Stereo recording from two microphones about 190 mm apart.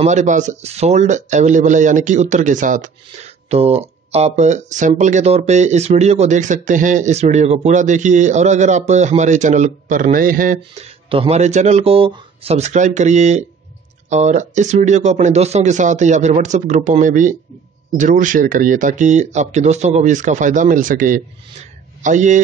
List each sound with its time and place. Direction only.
0.0 s speech: 40° right (ahead or behind)
11.1 s speech: 30° right (ahead or behind)